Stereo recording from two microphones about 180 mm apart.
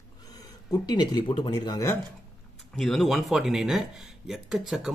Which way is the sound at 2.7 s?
Centre (ahead or behind).